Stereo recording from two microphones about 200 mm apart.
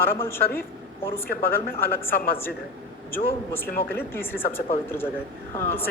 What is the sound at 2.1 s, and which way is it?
Speech, 45° left (ahead or behind).